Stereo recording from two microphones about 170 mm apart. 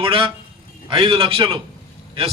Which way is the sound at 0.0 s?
30° right (ahead or behind).